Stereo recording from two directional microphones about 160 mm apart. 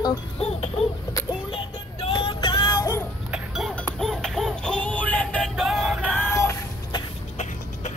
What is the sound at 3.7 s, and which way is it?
Synthetic singing, 5° left (ahead or behind).